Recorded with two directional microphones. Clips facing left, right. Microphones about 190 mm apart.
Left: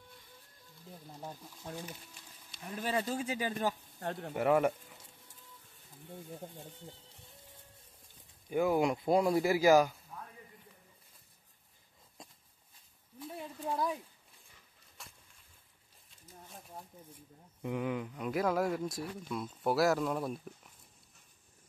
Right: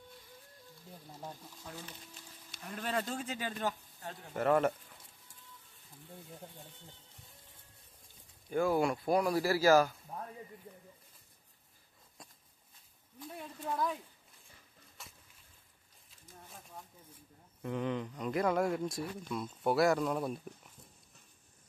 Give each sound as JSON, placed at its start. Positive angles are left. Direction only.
{"t": 2.6, "sound": "speech", "side_deg": 5}
{"t": 4.0, "sound": "speech", "side_deg": 60}
{"t": 4.4, "sound": "speech", "side_deg": 10}
{"t": 8.5, "sound": "speech", "side_deg": 15}
{"t": 12.2, "sound": "a sound", "side_deg": 25}
{"t": 13.4, "sound": "speech", "side_deg": 10}
{"t": 15.0, "sound": "a sound", "side_deg": 0}
{"t": 17.6, "sound": "speech", "side_deg": 10}